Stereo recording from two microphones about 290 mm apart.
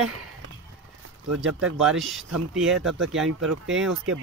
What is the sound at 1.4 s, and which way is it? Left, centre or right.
Speech, right.